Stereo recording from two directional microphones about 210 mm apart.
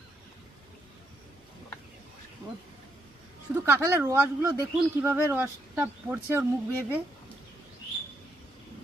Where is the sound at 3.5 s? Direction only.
10° right (ahead or behind).